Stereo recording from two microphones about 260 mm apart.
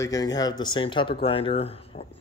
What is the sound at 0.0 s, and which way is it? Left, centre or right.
Speech, centre.